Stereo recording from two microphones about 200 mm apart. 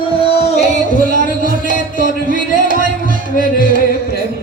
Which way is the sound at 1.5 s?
40° left (ahead or behind).